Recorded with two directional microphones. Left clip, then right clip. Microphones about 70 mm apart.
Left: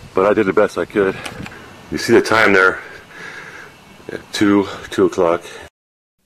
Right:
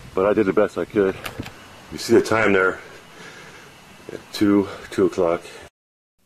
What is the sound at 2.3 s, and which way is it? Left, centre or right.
Speech, centre.